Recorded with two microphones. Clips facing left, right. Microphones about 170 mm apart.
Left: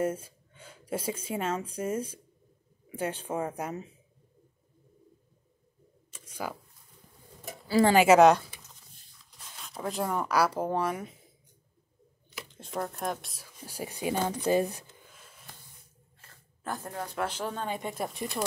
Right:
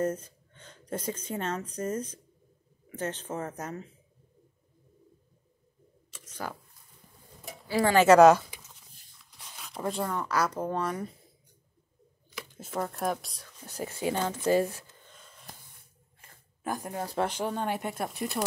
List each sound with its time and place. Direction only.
0.0 s speech: 10° left (ahead or behind)
6.2 s shuffling cards: 10° left (ahead or behind)
7.8 s speech: 15° left (ahead or behind)
8.1 s speech: centre (ahead or behind)
9.6 s a sound: centre (ahead or behind)
10.0 s speech: 10° left (ahead or behind)
12.4 s speech: 5° right (ahead or behind); by 15.0 s 15° left (ahead or behind)
15.0 s snort: 5° left (ahead or behind)
16.2 s a sound: 15° right (ahead or behind)
17.0 s speech: 30° right (ahead or behind)
17.6 s speech: 5° right (ahead or behind)